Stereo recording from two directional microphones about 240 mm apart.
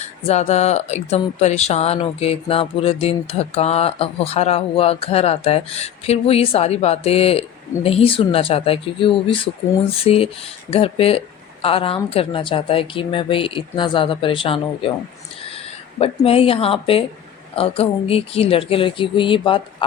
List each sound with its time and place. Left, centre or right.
0.0 s speech: left
16.0 s speech: left